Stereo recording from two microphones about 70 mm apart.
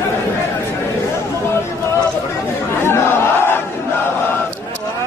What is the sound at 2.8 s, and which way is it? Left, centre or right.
Battle cry, left.